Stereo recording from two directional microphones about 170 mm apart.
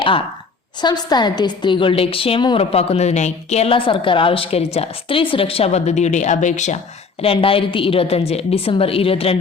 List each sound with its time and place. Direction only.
0.8 s a woman's voice: 25° left (ahead or behind)